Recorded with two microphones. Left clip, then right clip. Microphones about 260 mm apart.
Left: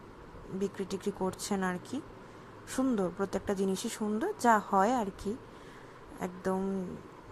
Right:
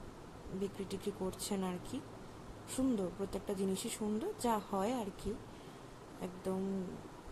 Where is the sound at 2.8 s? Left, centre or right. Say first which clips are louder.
Left 6 dB; left.